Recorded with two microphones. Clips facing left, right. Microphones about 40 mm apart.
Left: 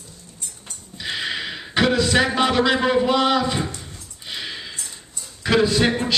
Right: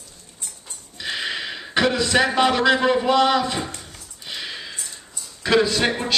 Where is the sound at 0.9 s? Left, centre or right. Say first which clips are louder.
Even; centre.